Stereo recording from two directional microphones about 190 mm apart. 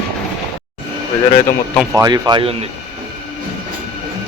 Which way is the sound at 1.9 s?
20° right (ahead or behind).